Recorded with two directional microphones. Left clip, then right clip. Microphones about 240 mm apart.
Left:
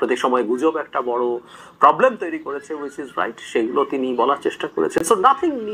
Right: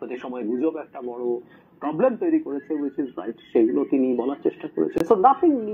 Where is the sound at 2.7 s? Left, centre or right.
Left.